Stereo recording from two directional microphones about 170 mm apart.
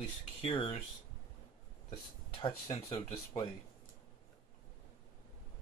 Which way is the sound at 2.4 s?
30° left (ahead or behind).